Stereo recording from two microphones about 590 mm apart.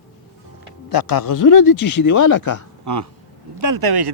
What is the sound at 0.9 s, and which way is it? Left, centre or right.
Speech, left.